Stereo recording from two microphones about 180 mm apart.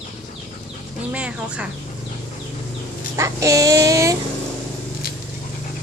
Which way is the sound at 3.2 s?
20° right (ahead or behind).